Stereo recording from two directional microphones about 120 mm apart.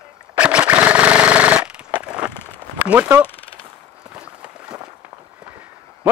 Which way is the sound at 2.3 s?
20° left (ahead or behind).